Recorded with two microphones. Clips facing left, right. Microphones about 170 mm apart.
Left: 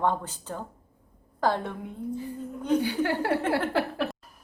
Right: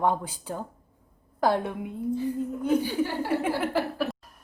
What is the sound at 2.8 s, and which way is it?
Speech, 75° left (ahead or behind).